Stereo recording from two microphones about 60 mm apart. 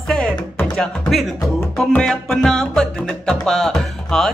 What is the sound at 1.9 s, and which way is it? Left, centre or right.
Music, centre.